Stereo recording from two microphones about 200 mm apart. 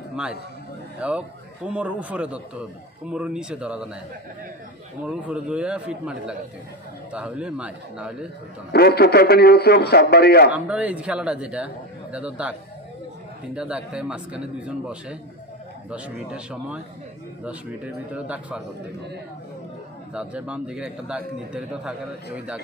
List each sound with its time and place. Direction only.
0.1 s a man's voice: 5° right (ahead or behind)
5.0 s a man's voice: 5° right (ahead or behind)
8.7 s a man's voice: 50° left (ahead or behind)
10.5 s a man's voice: 5° right (ahead or behind)
13.6 s a man's voice: 5° right (ahead or behind)
20.2 s a man's voice: 5° right (ahead or behind)